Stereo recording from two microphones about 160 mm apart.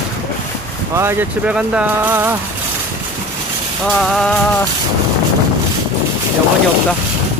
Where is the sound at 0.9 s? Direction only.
15° right (ahead or behind).